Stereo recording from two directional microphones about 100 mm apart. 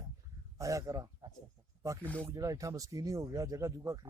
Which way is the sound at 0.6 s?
30° right (ahead or behind).